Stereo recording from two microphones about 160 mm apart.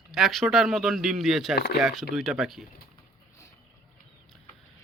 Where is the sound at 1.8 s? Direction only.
Centre (ahead or behind).